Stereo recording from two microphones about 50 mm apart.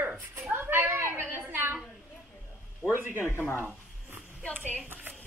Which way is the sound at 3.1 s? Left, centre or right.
Left.